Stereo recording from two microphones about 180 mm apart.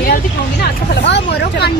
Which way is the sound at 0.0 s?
60° left (ahead or behind).